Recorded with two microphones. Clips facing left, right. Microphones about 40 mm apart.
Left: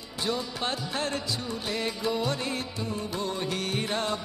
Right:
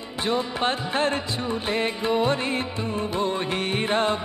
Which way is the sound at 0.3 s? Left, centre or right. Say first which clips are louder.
Right 7 dB; right.